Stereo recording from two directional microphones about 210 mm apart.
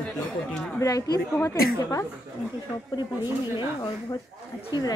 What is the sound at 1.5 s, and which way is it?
Speech, 45° left (ahead or behind).